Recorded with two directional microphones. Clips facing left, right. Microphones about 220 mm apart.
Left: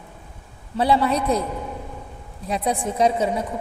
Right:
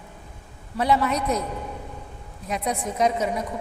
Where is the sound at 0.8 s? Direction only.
30° left (ahead or behind).